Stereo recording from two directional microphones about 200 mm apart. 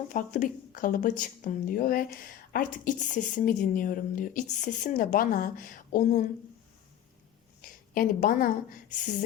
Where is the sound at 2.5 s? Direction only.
45° left (ahead or behind).